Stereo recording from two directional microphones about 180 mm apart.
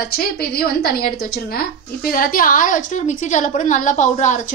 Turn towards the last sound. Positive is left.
turn(degrees=45)  # may be behind; listen again after turning